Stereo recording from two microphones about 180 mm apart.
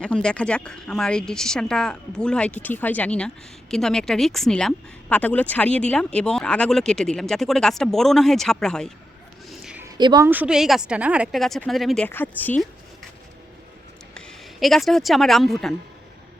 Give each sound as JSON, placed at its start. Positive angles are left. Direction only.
{"t": 0.0, "sound": "speech", "side_deg": 5}
{"t": 9.5, "sound": "a sound", "side_deg": -5}
{"t": 10.0, "sound": "a woman's voice", "side_deg": -25}
{"t": 10.2, "sound": "speech", "side_deg": -10}
{"t": 14.1, "sound": "speech", "side_deg": 5}